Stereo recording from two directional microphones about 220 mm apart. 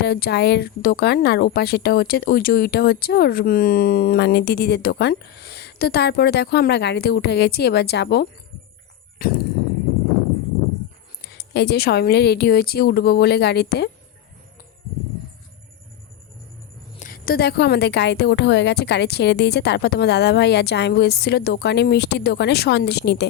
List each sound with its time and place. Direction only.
0.0 s speech: 50° left (ahead or behind)
11.2 s speech: 50° left (ahead or behind)
17.0 s speech: 40° left (ahead or behind)